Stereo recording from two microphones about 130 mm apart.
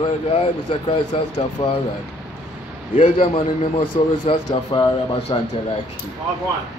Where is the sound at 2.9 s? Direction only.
65° left (ahead or behind).